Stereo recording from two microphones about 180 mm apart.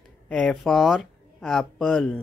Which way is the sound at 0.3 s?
5° left (ahead or behind).